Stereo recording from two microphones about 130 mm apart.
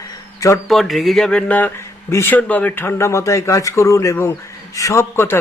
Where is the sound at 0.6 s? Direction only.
Centre (ahead or behind).